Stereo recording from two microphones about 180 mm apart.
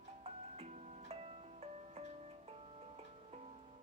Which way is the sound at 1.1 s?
35° right (ahead or behind).